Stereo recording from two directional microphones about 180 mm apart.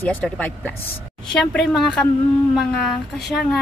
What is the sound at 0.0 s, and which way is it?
Speech, 10° left (ahead or behind).